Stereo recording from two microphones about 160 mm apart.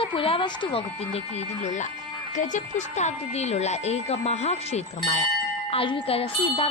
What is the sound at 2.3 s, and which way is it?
Speech, 50° left (ahead or behind).